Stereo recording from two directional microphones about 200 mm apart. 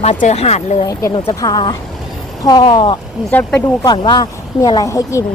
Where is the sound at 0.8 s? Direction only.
20° left (ahead or behind).